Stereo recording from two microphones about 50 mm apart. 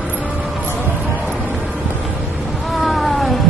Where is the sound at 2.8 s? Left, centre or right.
Centre.